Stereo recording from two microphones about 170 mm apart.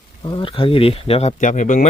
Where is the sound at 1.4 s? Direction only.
50° left (ahead or behind).